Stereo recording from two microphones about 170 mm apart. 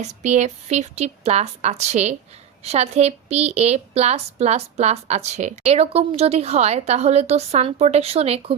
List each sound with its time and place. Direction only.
0.0 s a woman's voice: 45° right (ahead or behind)